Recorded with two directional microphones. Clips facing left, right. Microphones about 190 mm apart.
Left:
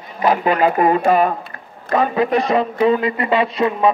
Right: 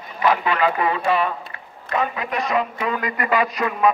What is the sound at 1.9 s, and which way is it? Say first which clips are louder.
A man's voice: left 8 dB; 35° left (ahead or behind).